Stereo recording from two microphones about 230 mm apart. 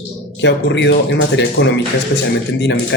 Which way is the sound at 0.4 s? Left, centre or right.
Left.